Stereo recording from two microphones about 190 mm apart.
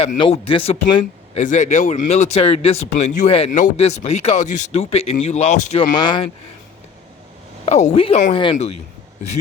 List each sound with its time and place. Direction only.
0.2 s speech: 30° left (ahead or behind)
1.4 s speech: 40° left (ahead or behind)
5.9 s speech: 20° left (ahead or behind)
7.6 s speech: 35° left (ahead or behind)